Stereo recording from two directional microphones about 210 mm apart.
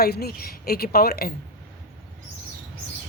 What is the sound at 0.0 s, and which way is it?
Speech, 50° left (ahead or behind).